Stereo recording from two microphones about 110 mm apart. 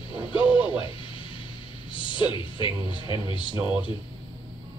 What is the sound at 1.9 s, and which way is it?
Speech, 50° left (ahead or behind).